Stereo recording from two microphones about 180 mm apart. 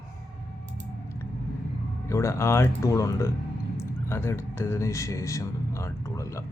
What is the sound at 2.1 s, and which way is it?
Speech, 15° left (ahead or behind).